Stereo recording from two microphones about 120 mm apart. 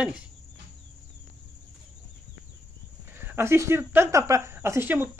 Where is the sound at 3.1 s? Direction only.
20° right (ahead or behind).